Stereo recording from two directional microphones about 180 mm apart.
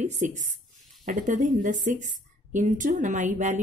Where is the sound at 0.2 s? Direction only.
45° right (ahead or behind).